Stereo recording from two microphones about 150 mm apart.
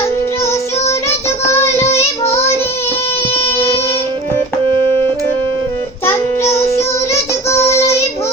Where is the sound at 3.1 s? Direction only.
40° left (ahead or behind).